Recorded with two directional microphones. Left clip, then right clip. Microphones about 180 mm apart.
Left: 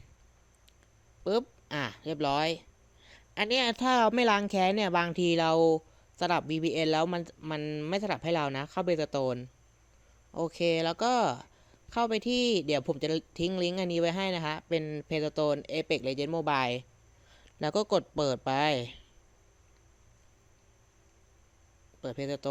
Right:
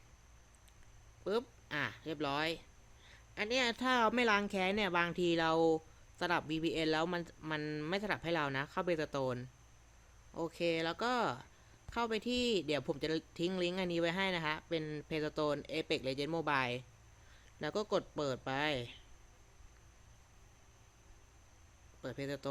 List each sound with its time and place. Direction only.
1.2 s speech: 25° left (ahead or behind)
22.0 s speech: 20° left (ahead or behind)